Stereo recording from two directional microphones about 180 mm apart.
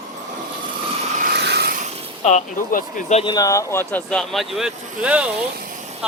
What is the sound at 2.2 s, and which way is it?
Speech, 45° left (ahead or behind).